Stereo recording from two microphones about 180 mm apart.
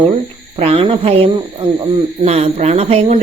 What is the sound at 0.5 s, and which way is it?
Speech, 35° right (ahead or behind).